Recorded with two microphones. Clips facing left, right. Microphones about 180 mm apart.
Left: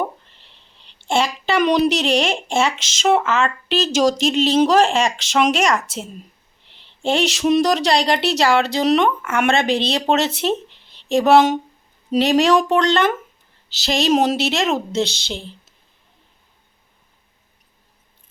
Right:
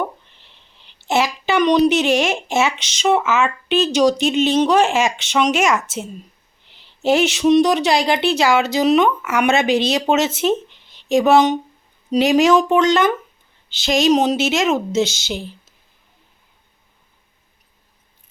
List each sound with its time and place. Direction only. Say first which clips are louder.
0.3 s a woman's voice: even; centre (ahead or behind)
7.0 s a woman's voice: right 3 dB; 5° right (ahead or behind)